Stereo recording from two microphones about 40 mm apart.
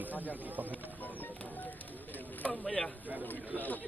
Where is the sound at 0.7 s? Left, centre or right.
Left.